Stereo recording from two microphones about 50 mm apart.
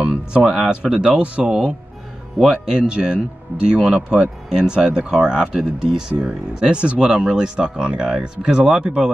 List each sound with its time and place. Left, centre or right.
0.0 s speech: centre
0.4 s speech: centre; by 1.4 s right
2.4 s speech: centre